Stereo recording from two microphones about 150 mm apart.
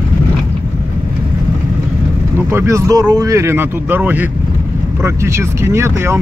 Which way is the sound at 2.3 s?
15° right (ahead or behind).